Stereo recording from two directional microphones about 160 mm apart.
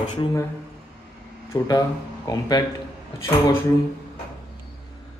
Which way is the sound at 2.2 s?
25° left (ahead or behind).